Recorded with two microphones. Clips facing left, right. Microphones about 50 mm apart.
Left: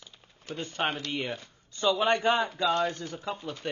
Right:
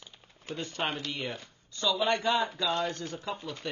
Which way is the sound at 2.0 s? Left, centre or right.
Left.